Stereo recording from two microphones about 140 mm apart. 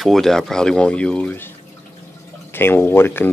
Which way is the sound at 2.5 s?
15° left (ahead or behind).